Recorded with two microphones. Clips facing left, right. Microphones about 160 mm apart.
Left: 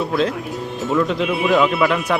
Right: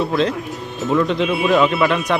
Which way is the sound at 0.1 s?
5° left (ahead or behind).